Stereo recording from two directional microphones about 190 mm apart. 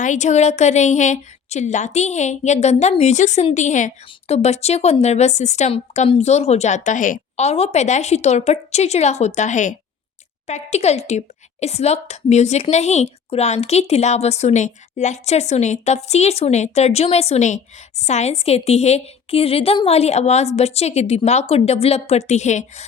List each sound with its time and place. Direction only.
0.0 s speech: 40° left (ahead or behind)